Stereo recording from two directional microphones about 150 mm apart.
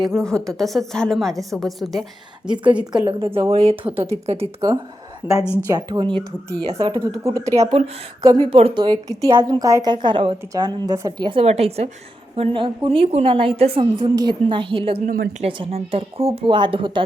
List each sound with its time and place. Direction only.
0.2 s a woman's voice: 5° left (ahead or behind)
3.1 s a woman's voice: 40° right (ahead or behind)
5.2 s a woman's voice: 15° right (ahead or behind)
5.6 s speech: 30° right (ahead or behind)
8.4 s a woman's voice: 40° right (ahead or behind)
8.8 s speech: 25° right (ahead or behind)
11.3 s a woman's voice: 40° right (ahead or behind)
15.0 s a woman's voice: 65° right (ahead or behind)
15.4 s a woman's voice: 35° right (ahead or behind)